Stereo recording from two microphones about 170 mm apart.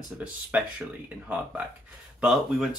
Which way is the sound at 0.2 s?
5° right (ahead or behind).